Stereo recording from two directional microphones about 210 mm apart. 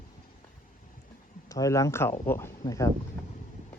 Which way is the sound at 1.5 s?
15° left (ahead or behind).